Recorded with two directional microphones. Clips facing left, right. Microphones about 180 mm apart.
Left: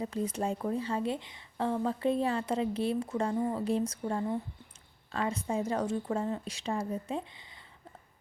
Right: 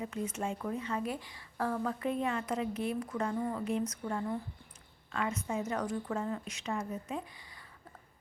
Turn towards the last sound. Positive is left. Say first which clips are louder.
# left 3 dB
turn(degrees=30)  # may be behind; listen again after turning